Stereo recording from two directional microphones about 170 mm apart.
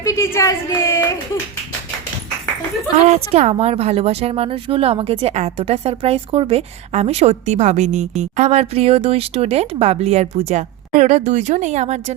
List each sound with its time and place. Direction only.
0.0 s a woman's voice: 15° left (ahead or behind)
3.1 s speech: 40° right (ahead or behind)